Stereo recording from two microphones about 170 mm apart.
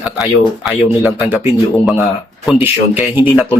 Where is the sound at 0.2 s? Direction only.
5° right (ahead or behind).